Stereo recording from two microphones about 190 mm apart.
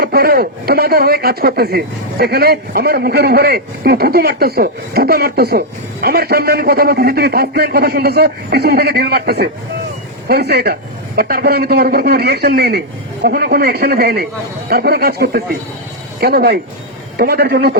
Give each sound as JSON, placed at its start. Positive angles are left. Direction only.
{"t": 0.0, "sound": "a man's voice", "side_deg": -55}